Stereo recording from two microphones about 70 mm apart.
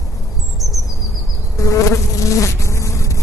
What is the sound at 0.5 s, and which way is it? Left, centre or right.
Bird vocalization, left.